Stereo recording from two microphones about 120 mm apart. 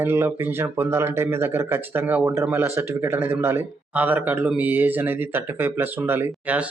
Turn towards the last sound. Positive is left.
turn(degrees=-10)  # may be behind; listen again after turning